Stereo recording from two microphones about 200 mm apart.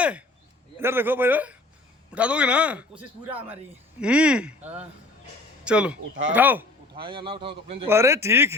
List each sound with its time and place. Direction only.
0.0 s a man's voice: 5° right (ahead or behind)
4.0 s a man's voice: 5° right (ahead or behind)
6.9 s speech: 25° right (ahead or behind)
7.9 s a man's voice: 15° right (ahead or behind)